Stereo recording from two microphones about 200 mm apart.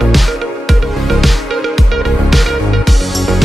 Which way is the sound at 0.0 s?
Centre (ahead or behind).